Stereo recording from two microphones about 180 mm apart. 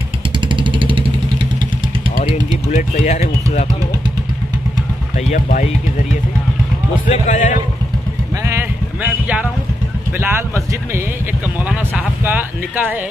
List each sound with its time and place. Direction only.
0.5 s vehicle: 25° right (ahead or behind)
2.1 s a sound: 40° left (ahead or behind)
5.3 s speech: 45° left (ahead or behind)
7.1 s speech: 45° left (ahead or behind)
8.5 s a sound: 10° right (ahead or behind)
10.2 s speech: 15° right (ahead or behind)